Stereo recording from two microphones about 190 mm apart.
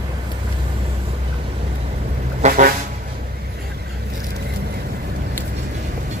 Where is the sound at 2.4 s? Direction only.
45° right (ahead or behind).